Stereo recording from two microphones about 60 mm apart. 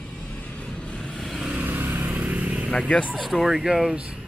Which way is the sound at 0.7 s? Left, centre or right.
Centre.